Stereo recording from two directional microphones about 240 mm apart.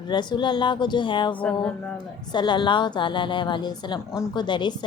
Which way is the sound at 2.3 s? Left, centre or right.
Centre.